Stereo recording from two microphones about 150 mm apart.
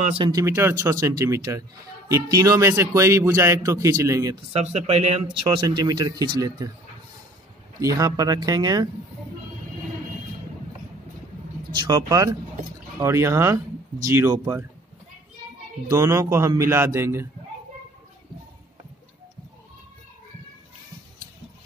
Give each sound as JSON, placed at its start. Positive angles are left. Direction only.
{"t": 0.0, "sound": "speech", "side_deg": -40}
{"t": 0.3, "sound": "a man's voice", "side_deg": -20}
{"t": 4.5, "sound": "speech", "side_deg": -45}
{"t": 5.6, "sound": "a man's voice", "side_deg": -25}
{"t": 7.8, "sound": "a man's voice", "side_deg": -25}
{"t": 11.7, "sound": "a man's voice", "side_deg": -30}
{"t": 15.9, "sound": "a man's voice", "side_deg": -20}